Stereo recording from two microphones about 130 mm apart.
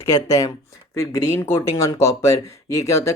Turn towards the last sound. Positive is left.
turn(degrees=25)  # may be behind; listen again after turning